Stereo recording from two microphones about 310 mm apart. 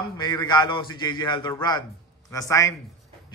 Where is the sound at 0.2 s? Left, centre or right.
Centre.